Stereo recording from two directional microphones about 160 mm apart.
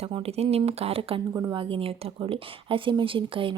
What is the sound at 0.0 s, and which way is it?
Speech, 40° right (ahead or behind).